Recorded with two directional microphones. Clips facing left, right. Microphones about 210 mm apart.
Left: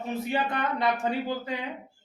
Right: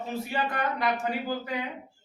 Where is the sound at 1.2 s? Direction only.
25° left (ahead or behind).